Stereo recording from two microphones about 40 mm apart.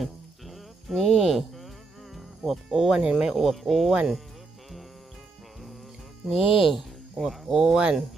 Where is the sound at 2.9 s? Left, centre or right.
Centre.